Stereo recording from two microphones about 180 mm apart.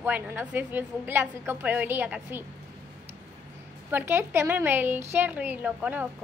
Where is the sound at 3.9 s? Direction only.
15° right (ahead or behind).